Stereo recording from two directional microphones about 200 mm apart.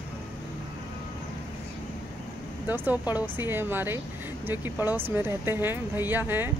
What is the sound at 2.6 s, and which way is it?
Speech, 10° right (ahead or behind).